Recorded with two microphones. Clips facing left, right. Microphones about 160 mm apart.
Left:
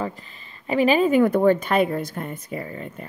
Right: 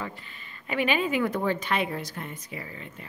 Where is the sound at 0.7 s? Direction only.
35° left (ahead or behind).